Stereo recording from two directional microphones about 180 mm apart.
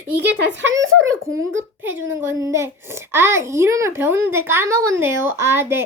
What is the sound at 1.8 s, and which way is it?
A child's voice, 10° right (ahead or behind).